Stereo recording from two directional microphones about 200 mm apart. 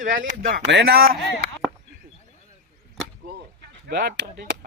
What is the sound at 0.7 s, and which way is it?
Speech, 55° right (ahead or behind).